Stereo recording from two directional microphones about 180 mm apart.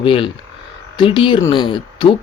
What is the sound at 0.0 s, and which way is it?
Speech, 30° left (ahead or behind).